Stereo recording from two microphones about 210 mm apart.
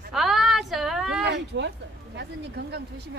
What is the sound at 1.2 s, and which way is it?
Speech, 55° right (ahead or behind).